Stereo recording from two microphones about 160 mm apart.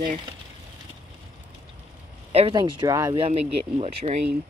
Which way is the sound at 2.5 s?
25° right (ahead or behind).